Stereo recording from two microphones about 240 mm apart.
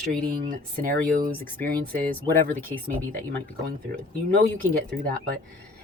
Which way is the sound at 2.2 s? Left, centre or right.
Centre.